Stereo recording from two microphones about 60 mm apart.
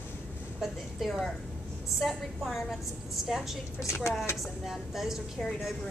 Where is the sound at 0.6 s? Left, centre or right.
Centre.